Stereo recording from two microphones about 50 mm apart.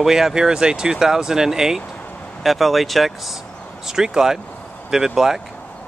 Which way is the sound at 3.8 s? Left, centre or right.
Centre.